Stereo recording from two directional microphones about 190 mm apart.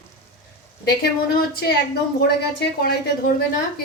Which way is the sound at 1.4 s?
55° left (ahead or behind).